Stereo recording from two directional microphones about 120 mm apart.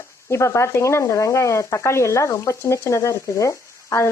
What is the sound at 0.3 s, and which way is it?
Speech, 25° left (ahead or behind).